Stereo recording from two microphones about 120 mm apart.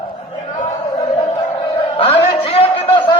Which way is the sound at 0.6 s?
80° left.